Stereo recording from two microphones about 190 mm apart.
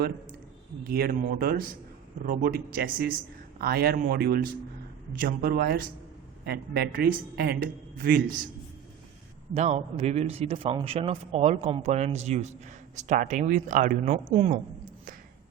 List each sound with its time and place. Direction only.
0.9 s speech: 55° right (ahead or behind)
9.6 s a man's voice: 35° right (ahead or behind)
14.3 s a man's voice: 35° right (ahead or behind)